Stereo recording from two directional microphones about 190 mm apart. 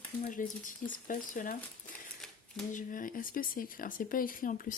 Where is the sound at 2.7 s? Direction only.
45° left (ahead or behind).